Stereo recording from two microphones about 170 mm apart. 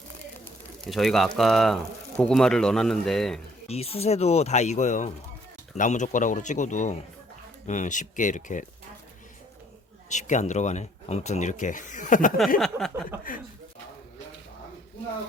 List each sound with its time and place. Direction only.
0.9 s speech: centre (ahead or behind)
3.7 s speech: 35° left (ahead or behind)
10.1 s speech: 45° left (ahead or behind)
12.5 s speech: centre (ahead or behind)